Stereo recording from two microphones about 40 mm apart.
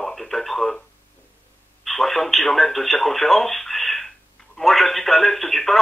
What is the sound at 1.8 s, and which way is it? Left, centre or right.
Speech, centre.